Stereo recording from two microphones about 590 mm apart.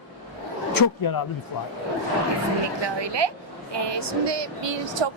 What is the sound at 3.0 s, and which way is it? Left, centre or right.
A woman's voice, right.